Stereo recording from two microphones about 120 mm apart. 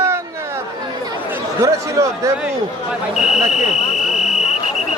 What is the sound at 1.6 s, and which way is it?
Speech, 25° right (ahead or behind).